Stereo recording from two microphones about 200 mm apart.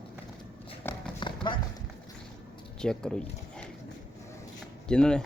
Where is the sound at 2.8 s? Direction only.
5° left (ahead or behind).